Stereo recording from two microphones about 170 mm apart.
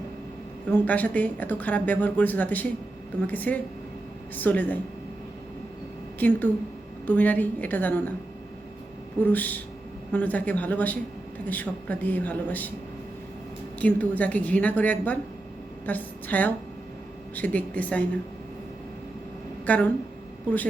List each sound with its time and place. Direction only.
0.7 s speech: 10° left (ahead or behind)
6.1 s speech: 10° left (ahead or behind)
9.2 s speech: 10° left (ahead or behind)
13.7 s speech: 10° left (ahead or behind)
19.6 s speech: 10° left (ahead or behind)